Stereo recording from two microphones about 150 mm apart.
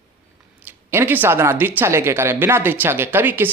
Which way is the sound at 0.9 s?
15° right (ahead or behind).